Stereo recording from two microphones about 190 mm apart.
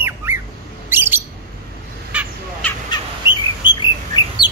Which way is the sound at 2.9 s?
25° left (ahead or behind).